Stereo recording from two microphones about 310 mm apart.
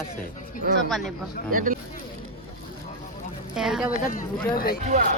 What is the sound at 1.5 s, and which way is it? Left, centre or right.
Speech, right.